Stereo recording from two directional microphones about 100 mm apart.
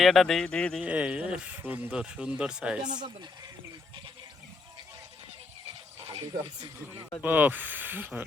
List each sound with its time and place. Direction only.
0.0 s speech: centre (ahead or behind)
0.8 s speech: 10° right (ahead or behind)
2.8 s speech: 45° right (ahead or behind)
6.1 s speech: 45° right (ahead or behind)
7.2 s speech: 20° right (ahead or behind)